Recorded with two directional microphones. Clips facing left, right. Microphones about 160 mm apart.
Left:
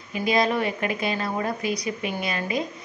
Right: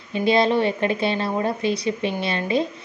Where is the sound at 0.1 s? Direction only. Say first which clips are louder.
Right 4 dB; 30° right (ahead or behind).